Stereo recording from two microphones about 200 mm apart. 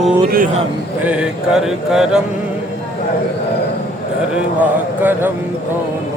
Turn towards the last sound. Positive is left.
turn(degrees=-10)  # may be behind; listen again after turning